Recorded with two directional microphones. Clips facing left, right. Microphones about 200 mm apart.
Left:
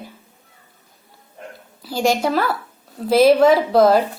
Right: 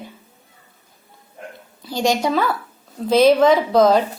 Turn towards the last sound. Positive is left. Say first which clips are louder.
# left 1 dB
turn(degrees=5)  # may be behind; listen again after turning